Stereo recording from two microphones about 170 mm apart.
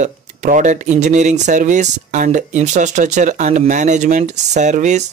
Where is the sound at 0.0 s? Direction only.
45° right (ahead or behind).